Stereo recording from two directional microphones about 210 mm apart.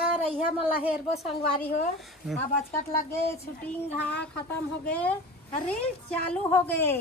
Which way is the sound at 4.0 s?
50° left (ahead or behind).